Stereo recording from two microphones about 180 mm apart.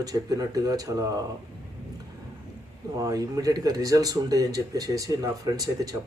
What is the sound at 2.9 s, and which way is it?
Speech, 20° right (ahead or behind).